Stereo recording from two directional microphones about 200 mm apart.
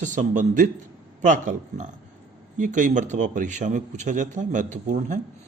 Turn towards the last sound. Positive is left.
turn(degrees=-40)  # may be behind; listen again after turning